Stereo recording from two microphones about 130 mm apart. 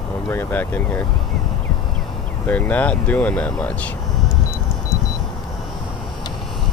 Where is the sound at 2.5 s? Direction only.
10° left (ahead or behind).